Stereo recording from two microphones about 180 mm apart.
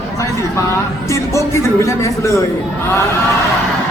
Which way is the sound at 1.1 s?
15° left (ahead or behind).